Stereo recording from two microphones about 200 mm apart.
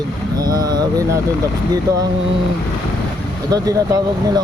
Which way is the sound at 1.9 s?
15° right (ahead or behind).